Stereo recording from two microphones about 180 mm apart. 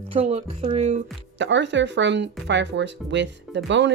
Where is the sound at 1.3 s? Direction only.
80° right.